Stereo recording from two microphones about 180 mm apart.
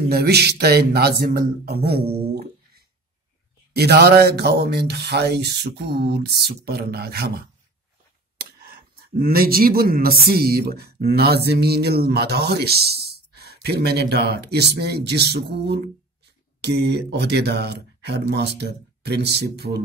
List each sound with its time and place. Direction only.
0.1 s speech: 65° right (ahead or behind)
8.4 s a sound: 60° right (ahead or behind)
9.2 s speech: 55° right (ahead or behind)